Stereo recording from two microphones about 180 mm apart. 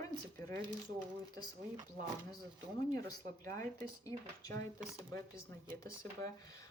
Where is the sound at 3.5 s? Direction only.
45° right (ahead or behind).